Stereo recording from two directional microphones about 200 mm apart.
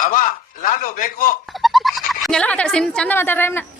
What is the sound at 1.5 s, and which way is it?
Speech, centre (ahead or behind).